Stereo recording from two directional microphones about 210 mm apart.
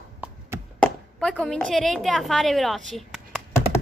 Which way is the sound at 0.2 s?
5° right (ahead or behind).